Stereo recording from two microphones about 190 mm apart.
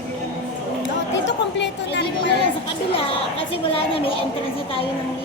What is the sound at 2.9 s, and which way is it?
A woman's voice, 30° left (ahead or behind).